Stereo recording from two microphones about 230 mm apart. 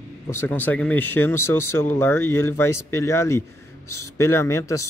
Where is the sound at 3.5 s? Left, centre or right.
Left.